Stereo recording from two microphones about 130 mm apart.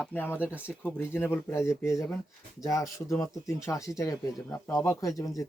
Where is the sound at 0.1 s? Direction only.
15° left (ahead or behind).